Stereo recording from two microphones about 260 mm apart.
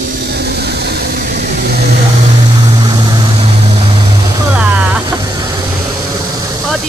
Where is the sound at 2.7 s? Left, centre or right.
Centre.